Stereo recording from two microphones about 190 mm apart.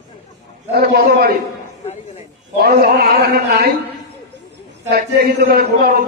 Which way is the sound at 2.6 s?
55° right (ahead or behind).